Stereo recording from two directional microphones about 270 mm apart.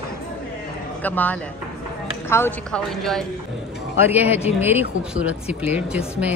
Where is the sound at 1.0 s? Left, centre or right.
Centre.